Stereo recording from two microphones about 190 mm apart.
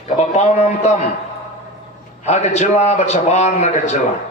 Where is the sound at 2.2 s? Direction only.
35° left (ahead or behind).